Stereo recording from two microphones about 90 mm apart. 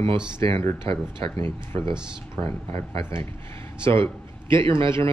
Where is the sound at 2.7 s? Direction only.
35° left (ahead or behind).